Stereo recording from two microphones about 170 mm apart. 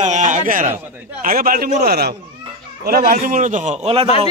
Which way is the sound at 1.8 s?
70° right (ahead or behind).